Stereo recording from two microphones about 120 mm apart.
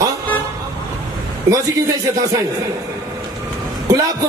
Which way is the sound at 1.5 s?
25° right (ahead or behind).